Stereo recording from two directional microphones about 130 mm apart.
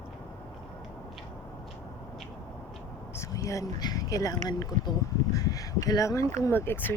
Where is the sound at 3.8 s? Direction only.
30° left (ahead or behind).